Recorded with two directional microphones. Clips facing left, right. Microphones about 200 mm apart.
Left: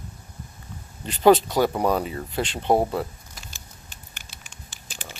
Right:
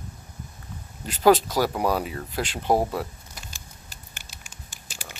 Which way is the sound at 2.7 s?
10° left (ahead or behind).